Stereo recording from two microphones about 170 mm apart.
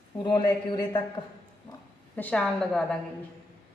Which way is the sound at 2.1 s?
5° left (ahead or behind).